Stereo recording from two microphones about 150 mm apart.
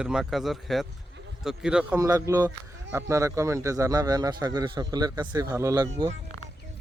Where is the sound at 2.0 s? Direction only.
20° right (ahead or behind).